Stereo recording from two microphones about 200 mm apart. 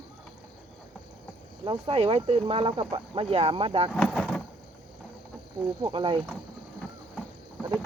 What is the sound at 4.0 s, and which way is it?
Vehicle, centre (ahead or behind).